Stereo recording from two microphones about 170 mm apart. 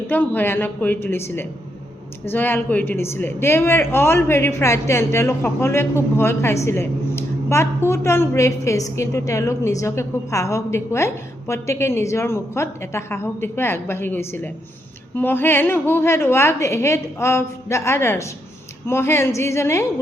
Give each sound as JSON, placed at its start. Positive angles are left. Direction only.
{"t": 0.1, "sound": "a woman's voice", "side_deg": 10}
{"t": 6.7, "sound": "a sound", "side_deg": 15}
{"t": 7.9, "sound": "a woman's voice", "side_deg": 15}